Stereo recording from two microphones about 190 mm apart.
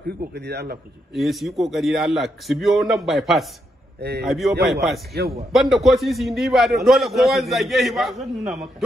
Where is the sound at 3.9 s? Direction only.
60° right (ahead or behind).